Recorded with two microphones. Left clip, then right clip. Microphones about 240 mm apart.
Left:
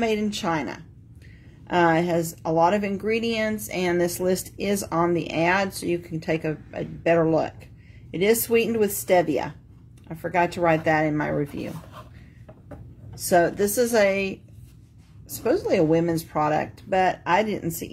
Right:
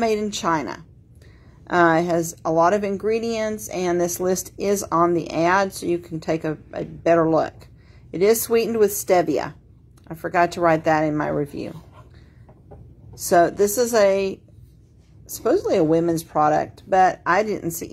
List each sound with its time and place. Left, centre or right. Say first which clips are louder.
0.0 s a woman's voice: right 3 dB; centre
13.3 s a woman's voice: right 3 dB; centre
15.4 s a woman's voice: right 2 dB; centre